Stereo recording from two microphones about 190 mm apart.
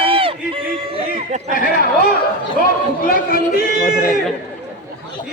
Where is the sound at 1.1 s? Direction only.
40° right (ahead or behind).